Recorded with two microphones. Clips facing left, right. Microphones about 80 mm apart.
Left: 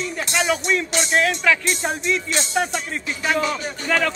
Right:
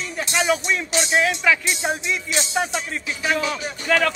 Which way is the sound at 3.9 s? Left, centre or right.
Right.